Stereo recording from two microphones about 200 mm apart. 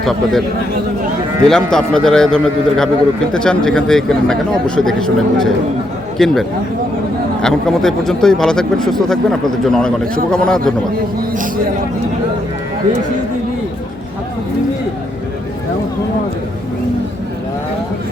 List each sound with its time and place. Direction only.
0.0 s speech: centre (ahead or behind)
1.5 s speech: 5° left (ahead or behind)
7.4 s speech: centre (ahead or behind)
11.2 s a man's voice: 45° right (ahead or behind)